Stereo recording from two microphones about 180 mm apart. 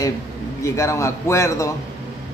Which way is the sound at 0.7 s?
15° left (ahead or behind).